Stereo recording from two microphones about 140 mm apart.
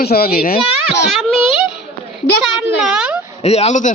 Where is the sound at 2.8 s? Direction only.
5° right (ahead or behind).